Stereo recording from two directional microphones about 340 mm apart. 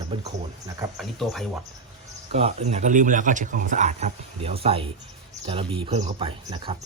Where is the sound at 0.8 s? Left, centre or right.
Centre.